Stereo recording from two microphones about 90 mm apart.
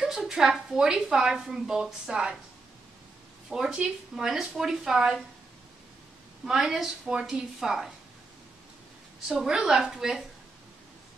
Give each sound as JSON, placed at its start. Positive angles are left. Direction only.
{"t": 0.0, "sound": "a woman's voice", "side_deg": -5}
{"t": 3.4, "sound": "speech", "side_deg": -5}
{"t": 6.4, "sound": "speech", "side_deg": -5}
{"t": 9.4, "sound": "speech", "side_deg": -5}